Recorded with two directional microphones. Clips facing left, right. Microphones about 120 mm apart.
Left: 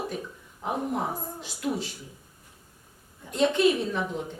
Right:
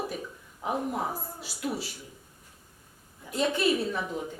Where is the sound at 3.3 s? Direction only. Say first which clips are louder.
Left 4 dB; 5° right (ahead or behind).